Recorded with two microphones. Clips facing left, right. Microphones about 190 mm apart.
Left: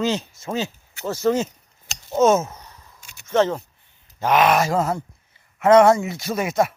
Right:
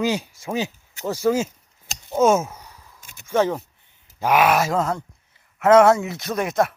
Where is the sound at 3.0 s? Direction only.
50° right (ahead or behind).